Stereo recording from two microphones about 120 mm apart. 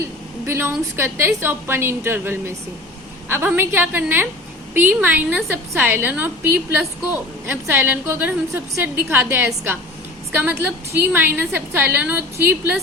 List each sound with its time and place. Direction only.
0.0 s a woman's voice: 20° right (ahead or behind)